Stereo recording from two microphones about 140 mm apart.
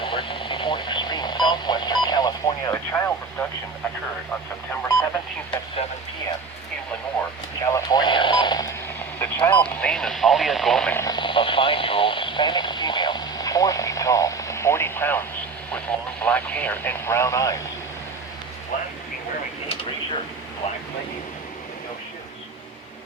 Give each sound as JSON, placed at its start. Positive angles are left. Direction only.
{"t": 0.0, "sound": "radio", "side_deg": 35}
{"t": 7.6, "sound": "radio", "side_deg": 25}
{"t": 9.1, "sound": "radio", "side_deg": 15}
{"t": 10.9, "sound": "radio", "side_deg": 25}
{"t": 16.2, "sound": "vehicle", "side_deg": 10}